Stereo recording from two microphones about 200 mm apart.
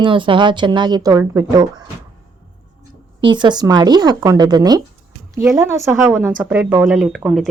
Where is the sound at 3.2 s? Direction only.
20° right (ahead or behind).